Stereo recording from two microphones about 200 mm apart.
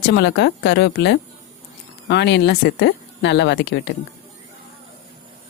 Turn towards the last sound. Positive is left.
turn(degrees=60)  # may be behind; listen again after turning